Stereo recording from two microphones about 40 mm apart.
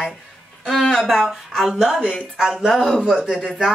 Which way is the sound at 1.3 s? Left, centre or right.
Centre.